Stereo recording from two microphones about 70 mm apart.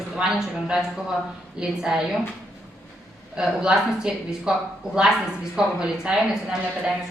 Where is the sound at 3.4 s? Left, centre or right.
Centre.